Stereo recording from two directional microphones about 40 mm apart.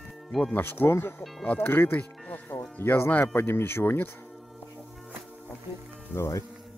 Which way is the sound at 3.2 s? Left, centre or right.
Left.